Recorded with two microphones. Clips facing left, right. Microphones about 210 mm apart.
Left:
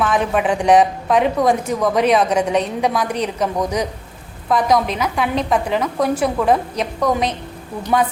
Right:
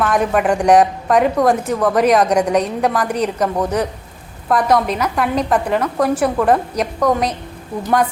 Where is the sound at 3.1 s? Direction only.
10° right (ahead or behind).